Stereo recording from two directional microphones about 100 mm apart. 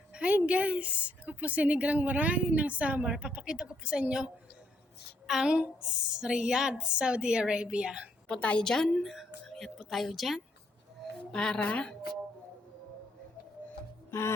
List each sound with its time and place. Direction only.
0.1 s a woman's voice: 15° right (ahead or behind)
8.3 s a woman's voice: 10° left (ahead or behind)
14.1 s music: 25° left (ahead or behind)